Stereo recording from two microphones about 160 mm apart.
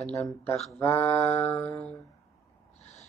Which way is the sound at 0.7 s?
15° left (ahead or behind).